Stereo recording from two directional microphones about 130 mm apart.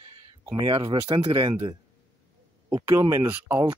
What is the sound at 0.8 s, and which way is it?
Speech, 35° right (ahead or behind).